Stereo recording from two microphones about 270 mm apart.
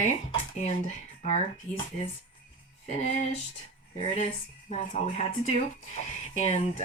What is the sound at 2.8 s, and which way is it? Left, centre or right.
Speech, left.